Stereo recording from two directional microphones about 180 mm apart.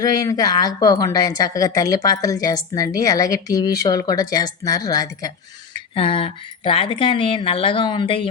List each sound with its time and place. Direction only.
0.0 s a woman's voice: 20° left (ahead or behind)